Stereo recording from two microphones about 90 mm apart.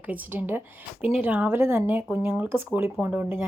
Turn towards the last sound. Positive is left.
turn(degrees=-20)  # may be behind; listen again after turning